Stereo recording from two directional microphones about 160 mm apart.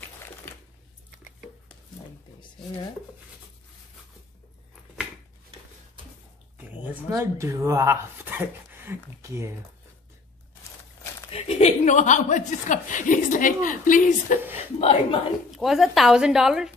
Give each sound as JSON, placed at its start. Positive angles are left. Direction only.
{"t": 6.6, "sound": "a sound", "side_deg": -10}
{"t": 7.1, "sound": "speech", "side_deg": -20}
{"t": 11.2, "sound": "speech", "side_deg": 40}
{"t": 14.8, "sound": "a woman's voice", "side_deg": 40}
{"t": 15.5, "sound": "speech", "side_deg": 0}